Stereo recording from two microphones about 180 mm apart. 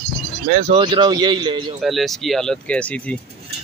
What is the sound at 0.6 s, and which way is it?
Speech, 30° right (ahead or behind).